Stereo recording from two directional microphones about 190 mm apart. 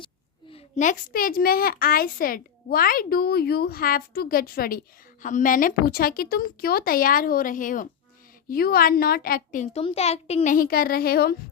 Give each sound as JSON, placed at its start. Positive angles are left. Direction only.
{"t": 0.5, "sound": "a woman's voice", "side_deg": 40}
{"t": 9.8, "sound": "a woman's voice", "side_deg": 35}